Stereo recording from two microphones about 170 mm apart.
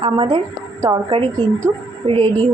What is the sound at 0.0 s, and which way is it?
Speech, 30° right (ahead or behind).